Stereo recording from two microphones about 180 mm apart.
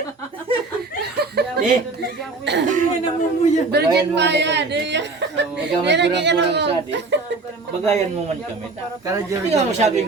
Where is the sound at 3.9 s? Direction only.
75° right (ahead or behind).